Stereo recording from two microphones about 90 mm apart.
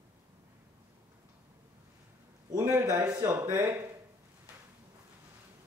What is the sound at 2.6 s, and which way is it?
A man's voice, 30° right (ahead or behind).